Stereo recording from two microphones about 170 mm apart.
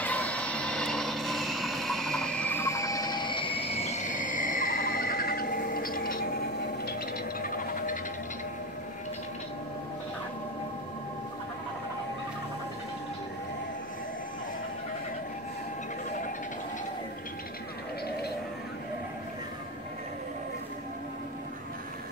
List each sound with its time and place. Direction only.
0.0 s vehicle: 10° left (ahead or behind); by 6.3 s 55° left (ahead or behind)
7.4 s music: 55° left (ahead or behind)